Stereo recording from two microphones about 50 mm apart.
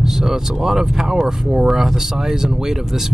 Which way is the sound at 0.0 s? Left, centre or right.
Centre.